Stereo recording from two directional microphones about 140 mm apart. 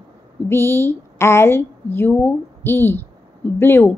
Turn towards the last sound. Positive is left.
turn(degrees=15)  # may be behind; listen again after turning